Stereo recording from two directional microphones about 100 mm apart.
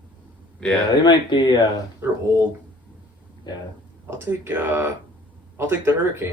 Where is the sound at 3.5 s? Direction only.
50° left (ahead or behind).